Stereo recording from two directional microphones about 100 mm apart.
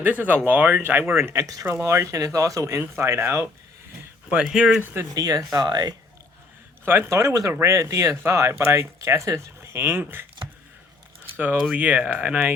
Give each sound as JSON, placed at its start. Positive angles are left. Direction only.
{"t": 0.0, "sound": "speech", "side_deg": -15}
{"t": 4.3, "sound": "speech", "side_deg": -10}
{"t": 5.1, "sound": "speech", "side_deg": -35}
{"t": 6.8, "sound": "speech", "side_deg": -25}
{"t": 11.3, "sound": "speech", "side_deg": -15}